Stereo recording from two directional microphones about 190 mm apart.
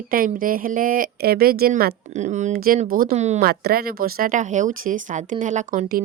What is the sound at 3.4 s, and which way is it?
A woman's voice, 55° right (ahead or behind).